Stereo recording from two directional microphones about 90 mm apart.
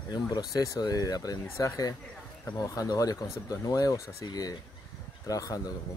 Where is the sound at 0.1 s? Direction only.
50° left (ahead or behind).